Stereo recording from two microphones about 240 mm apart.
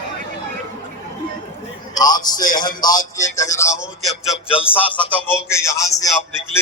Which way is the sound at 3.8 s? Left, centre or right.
Centre.